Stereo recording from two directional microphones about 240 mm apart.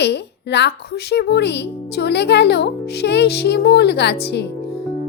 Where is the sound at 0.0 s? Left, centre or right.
Left.